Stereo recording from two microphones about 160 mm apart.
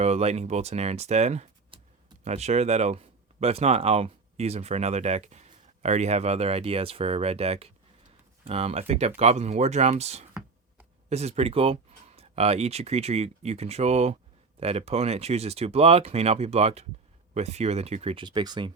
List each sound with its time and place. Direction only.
0.0 s speech: 40° right (ahead or behind); by 18.7 s 25° right (ahead or behind)